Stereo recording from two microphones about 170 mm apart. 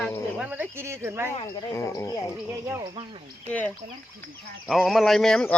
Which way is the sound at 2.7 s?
15° right (ahead or behind).